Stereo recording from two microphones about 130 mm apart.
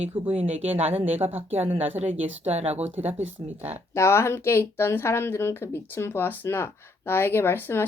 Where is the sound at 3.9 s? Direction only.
20° left (ahead or behind).